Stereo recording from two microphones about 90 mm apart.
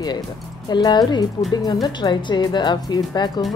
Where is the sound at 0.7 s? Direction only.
50° left (ahead or behind).